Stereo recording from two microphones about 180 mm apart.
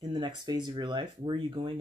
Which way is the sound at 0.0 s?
25° right (ahead or behind).